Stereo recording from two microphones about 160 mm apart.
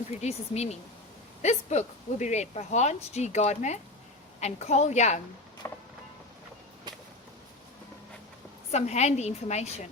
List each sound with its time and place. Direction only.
0.2 s speech: 40° left (ahead or behind)
5.6 s vehicle: 15° left (ahead or behind)
8.7 s speech: 45° left (ahead or behind)